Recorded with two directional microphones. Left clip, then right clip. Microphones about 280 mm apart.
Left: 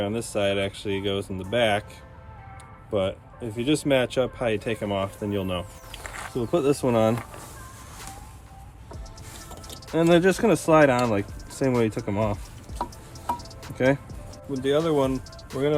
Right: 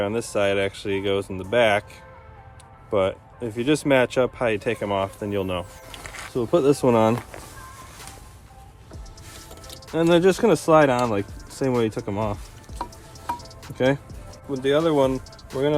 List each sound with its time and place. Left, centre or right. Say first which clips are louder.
0.0 s speech: right 3 dB; centre
2.9 s speech: right 4 dB; right
10.0 s speech: right 2 dB; centre
12.8 s music: left 1 dB; centre
13.7 s speech: right 1 dB; centre
15.5 s speech: right 2 dB; centre